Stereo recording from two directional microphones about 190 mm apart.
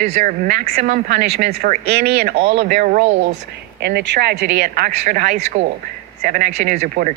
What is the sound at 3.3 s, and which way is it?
A woman's voice, 60° right (ahead or behind).